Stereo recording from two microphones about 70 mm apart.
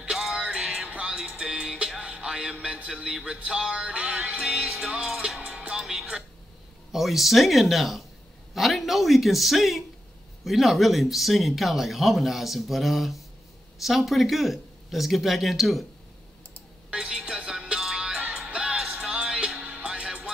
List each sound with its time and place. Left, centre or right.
0.0 s music: centre
4.4 s music: centre
6.9 s speech: centre
16.9 s music: centre